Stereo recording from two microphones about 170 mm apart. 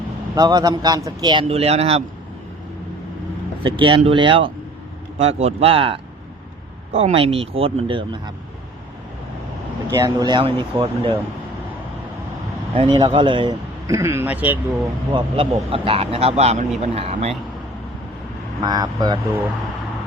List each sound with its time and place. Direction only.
0.3 s a man's voice: 20° right (ahead or behind); by 2.0 s 40° right (ahead or behind)
3.6 s speech: 30° right (ahead or behind)
9.9 s a man's voice: 20° right (ahead or behind)
12.7 s a man's voice: 30° right (ahead or behind); by 14.6 s 10° right (ahead or behind)
15.1 s speech: 35° right (ahead or behind)
18.6 s a man's voice: 25° right (ahead or behind)